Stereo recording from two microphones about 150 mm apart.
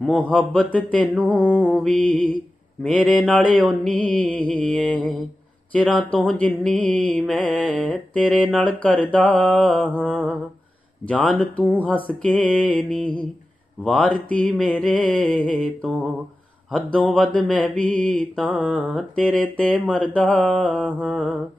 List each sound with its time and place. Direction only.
0.0 s mantra: 5° left (ahead or behind)
17.0 s mantra: 5° left (ahead or behind)